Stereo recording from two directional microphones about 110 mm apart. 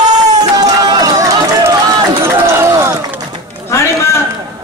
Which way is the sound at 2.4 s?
25° right (ahead or behind).